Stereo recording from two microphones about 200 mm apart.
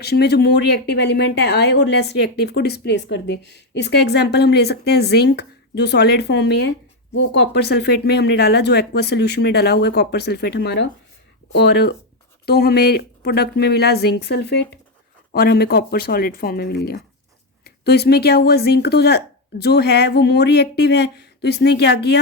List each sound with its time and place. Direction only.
0.0 s speech: 55° left (ahead or behind)